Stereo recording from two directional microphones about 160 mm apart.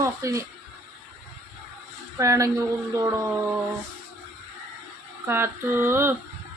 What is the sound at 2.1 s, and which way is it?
Speech, 20° right (ahead or behind).